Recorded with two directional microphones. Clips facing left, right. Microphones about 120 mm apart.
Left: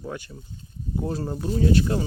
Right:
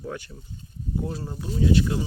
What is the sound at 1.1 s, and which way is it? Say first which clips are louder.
Speech: left 5 dB; 35° left (ahead or behind).